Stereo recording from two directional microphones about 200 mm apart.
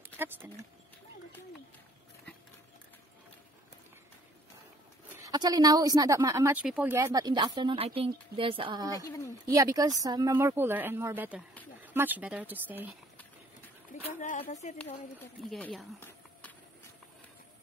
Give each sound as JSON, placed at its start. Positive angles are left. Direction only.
{"t": 0.0, "sound": "speech", "side_deg": -10}
{"t": 5.2, "sound": "a woman's voice", "side_deg": -20}
{"t": 8.9, "sound": "a woman's voice", "side_deg": 15}
{"t": 9.5, "sound": "a woman's voice", "side_deg": -15}
{"t": 14.0, "sound": "a woman's voice", "side_deg": 40}
{"t": 15.1, "sound": "speech", "side_deg": 5}